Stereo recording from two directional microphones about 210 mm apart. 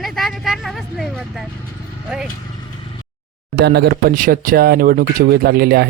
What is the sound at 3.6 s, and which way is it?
Speech, 50° right (ahead or behind).